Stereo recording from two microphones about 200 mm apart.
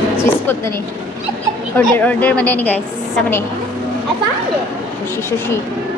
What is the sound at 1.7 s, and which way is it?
Speech, 10° left (ahead or behind).